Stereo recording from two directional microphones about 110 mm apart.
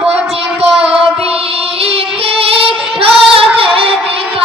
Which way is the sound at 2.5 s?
60° right (ahead or behind).